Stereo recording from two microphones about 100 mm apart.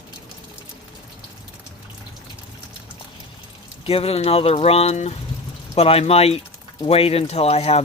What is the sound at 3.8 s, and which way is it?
Speech, 85° left.